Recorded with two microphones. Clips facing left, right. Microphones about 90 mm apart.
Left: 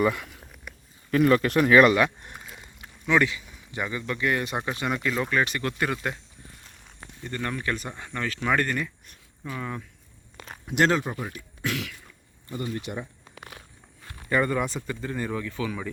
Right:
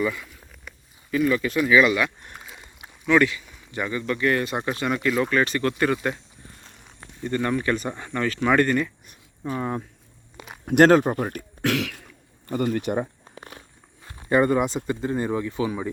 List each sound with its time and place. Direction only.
0.0 s speech: 60° left (ahead or behind)
0.7 s a sound: 5° left (ahead or behind)
1.1 s speech: 55° left (ahead or behind)
2.4 s rowboat: centre (ahead or behind)
3.1 s speech: 20° left (ahead or behind); by 8.9 s centre (ahead or behind)
9.5 s speech: 35° right (ahead or behind)
10.3 s a sound: 10° right (ahead or behind)
10.7 s speech: 50° right (ahead or behind); by 12.0 s 75° right (ahead or behind)
12.5 s speech: 55° right (ahead or behind)
13.3 s walk: 30° right (ahead or behind)
14.0 s speech: 20° right (ahead or behind)